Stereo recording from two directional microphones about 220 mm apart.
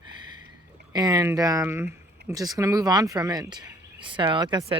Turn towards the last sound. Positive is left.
turn(degrees=-20)  # may be behind; listen again after turning